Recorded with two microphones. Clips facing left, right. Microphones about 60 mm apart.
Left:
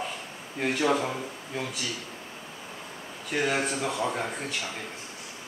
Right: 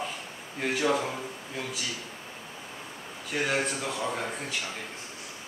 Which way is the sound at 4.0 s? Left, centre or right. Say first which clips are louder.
Left 2 dB; centre.